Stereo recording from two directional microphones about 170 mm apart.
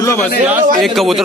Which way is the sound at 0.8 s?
Centre (ahead or behind).